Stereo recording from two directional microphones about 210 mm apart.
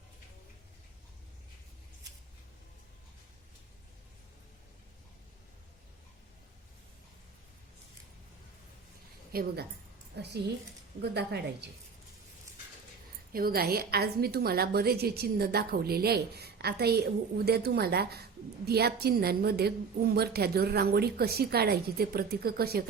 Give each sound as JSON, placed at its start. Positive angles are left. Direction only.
{"t": 9.3, "sound": "a woman's voice", "side_deg": -45}
{"t": 13.3, "sound": "a woman's voice", "side_deg": -45}